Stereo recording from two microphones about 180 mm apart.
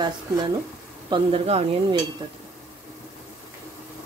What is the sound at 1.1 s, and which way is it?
Speech, 35° right (ahead or behind).